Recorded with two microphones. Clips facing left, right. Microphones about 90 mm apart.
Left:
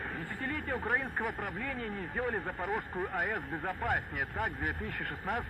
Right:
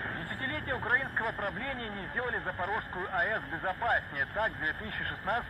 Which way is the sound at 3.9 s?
55° right (ahead or behind).